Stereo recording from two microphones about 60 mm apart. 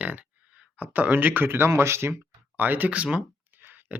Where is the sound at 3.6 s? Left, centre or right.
Right.